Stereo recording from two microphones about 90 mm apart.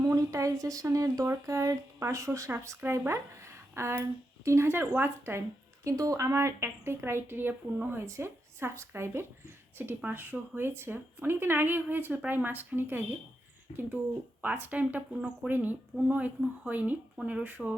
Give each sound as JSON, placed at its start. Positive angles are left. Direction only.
{"t": 0.0, "sound": "speech", "side_deg": -40}
{"t": 5.8, "sound": "speech", "side_deg": -40}
{"t": 14.4, "sound": "a woman's voice", "side_deg": -20}